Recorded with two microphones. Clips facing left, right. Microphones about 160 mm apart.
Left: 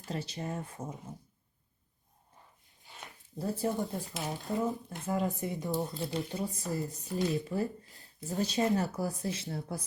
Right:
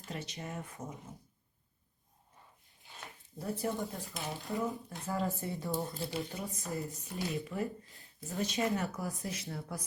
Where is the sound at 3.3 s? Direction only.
30° left (ahead or behind).